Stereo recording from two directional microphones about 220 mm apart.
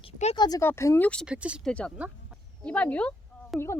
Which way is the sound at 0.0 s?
25° left (ahead or behind).